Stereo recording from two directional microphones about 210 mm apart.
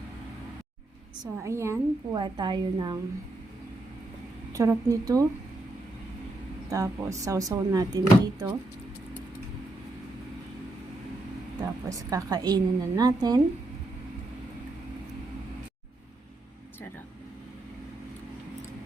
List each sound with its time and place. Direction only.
1.2 s a woman's voice: 15° right (ahead or behind)
4.5 s speech: 15° right (ahead or behind)
6.7 s speech: 15° right (ahead or behind)
11.6 s speech: 15° right (ahead or behind)